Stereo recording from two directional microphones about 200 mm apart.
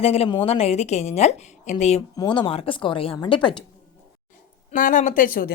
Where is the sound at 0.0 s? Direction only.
30° left (ahead or behind).